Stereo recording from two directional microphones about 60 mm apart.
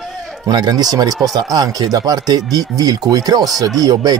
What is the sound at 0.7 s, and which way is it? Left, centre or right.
Speech, right.